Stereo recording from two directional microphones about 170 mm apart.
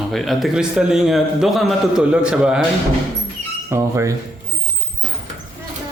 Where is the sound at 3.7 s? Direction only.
15° right (ahead or behind).